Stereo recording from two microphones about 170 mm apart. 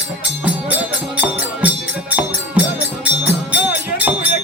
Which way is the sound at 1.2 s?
10° right (ahead or behind).